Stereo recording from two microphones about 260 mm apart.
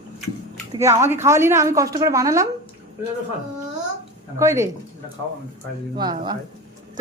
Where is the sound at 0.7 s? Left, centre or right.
Centre.